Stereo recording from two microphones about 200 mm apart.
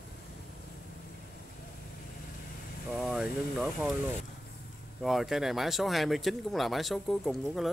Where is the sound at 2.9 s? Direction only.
Centre (ahead or behind).